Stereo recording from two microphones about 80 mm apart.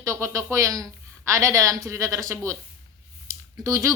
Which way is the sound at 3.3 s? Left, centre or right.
Right.